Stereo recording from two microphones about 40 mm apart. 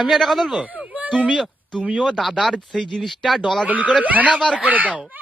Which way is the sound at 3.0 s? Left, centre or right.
Centre.